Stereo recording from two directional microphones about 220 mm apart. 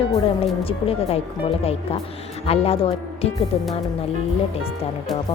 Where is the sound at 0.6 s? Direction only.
25° left (ahead or behind).